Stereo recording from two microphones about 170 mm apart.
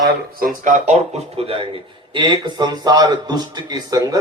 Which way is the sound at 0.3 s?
55° right (ahead or behind).